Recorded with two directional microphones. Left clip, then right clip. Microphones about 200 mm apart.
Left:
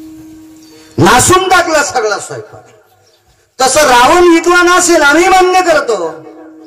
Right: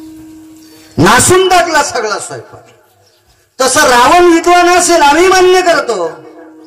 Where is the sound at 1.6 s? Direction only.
10° left (ahead or behind).